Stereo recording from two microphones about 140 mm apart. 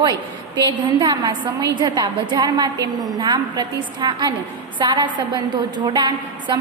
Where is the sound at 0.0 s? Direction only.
30° right (ahead or behind).